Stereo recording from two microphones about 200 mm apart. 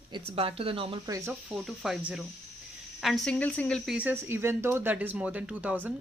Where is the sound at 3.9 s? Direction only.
10° right (ahead or behind).